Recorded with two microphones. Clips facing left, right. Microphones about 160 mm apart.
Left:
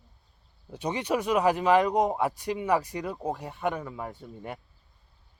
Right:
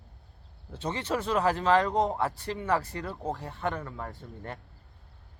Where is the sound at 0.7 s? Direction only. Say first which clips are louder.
Left 3 dB; 15° left (ahead or behind).